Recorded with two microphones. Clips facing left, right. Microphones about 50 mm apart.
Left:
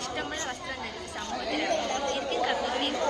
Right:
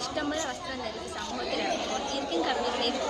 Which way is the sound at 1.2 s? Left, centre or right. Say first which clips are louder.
Left 2 dB; left.